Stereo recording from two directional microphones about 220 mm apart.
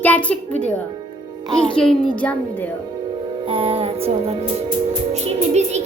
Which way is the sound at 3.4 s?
25° right (ahead or behind).